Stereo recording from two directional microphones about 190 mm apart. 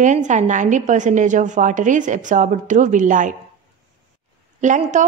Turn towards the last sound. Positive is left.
turn(degrees=-40)  # may be behind; listen again after turning